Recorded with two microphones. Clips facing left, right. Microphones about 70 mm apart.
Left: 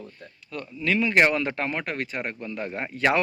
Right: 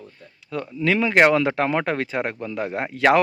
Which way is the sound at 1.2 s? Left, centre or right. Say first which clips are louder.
Right 6 dB; right.